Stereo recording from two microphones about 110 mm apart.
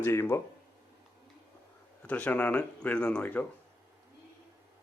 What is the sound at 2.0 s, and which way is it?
Speech, 15° left (ahead or behind).